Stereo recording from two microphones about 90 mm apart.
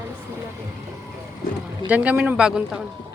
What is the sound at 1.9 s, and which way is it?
Speech, 15° right (ahead or behind).